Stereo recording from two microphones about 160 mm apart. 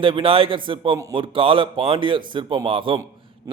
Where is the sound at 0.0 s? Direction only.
30° right (ahead or behind).